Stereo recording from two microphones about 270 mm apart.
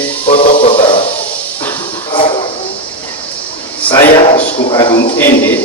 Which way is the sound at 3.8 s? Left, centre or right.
Centre.